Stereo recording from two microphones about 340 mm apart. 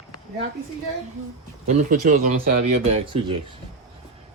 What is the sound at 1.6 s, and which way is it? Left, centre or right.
Speech, right.